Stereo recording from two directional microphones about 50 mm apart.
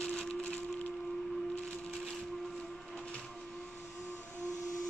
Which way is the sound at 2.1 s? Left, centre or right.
Centre.